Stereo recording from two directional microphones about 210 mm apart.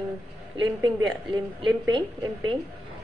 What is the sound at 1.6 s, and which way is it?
Female singing, 20° right (ahead or behind).